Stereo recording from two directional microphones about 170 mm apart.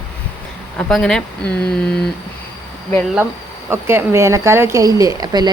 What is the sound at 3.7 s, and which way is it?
Speech, 15° right (ahead or behind).